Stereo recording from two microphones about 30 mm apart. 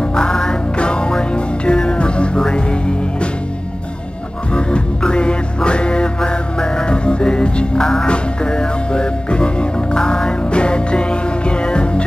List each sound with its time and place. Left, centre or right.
0.1 s music: left
4.6 s music: left
7.8 s music: centre
8.1 s music: left